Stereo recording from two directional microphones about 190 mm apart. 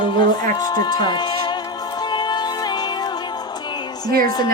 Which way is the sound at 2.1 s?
25° left (ahead or behind).